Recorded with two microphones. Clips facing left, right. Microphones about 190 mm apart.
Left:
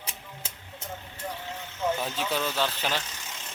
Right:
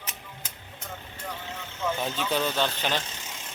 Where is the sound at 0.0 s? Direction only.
30° left (ahead or behind).